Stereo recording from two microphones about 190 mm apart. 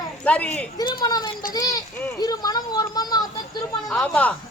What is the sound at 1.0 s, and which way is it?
Speech, 20° left (ahead or behind).